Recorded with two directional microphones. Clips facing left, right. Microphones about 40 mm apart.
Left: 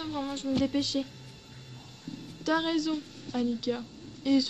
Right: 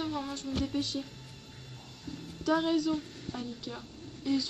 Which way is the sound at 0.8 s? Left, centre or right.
Left.